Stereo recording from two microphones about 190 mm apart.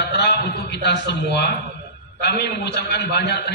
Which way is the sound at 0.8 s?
65° left (ahead or behind).